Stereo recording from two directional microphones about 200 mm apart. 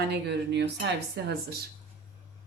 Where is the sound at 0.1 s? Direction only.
55° right (ahead or behind).